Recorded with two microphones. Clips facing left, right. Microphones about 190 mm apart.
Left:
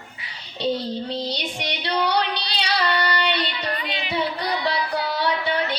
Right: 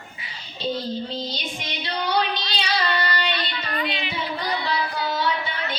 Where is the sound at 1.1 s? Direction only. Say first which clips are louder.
Left 3 dB; 70° left (ahead or behind).